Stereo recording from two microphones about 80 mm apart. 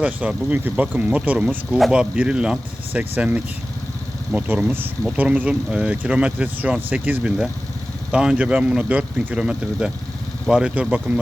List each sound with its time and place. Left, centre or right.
0.0 s speech: centre